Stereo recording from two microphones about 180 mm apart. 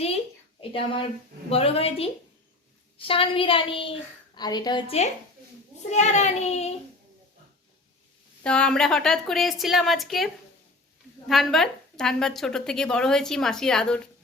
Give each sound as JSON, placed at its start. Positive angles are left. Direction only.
{"t": 0.6, "sound": "child singing", "side_deg": 30}
{"t": 3.0, "sound": "a woman's voice", "side_deg": 30}
{"t": 5.9, "sound": "child singing", "side_deg": 40}
{"t": 8.4, "sound": "a woman's voice", "side_deg": 5}
{"t": 11.3, "sound": "a woman's voice", "side_deg": 0}